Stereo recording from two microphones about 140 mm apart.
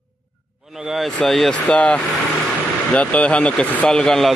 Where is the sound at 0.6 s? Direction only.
5° right (ahead or behind).